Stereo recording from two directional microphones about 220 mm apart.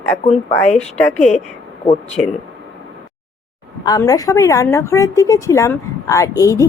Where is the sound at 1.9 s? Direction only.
30° left (ahead or behind).